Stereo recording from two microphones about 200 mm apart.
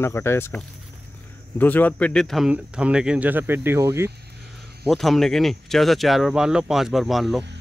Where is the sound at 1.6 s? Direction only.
10° left (ahead or behind); by 4.1 s 10° right (ahead or behind).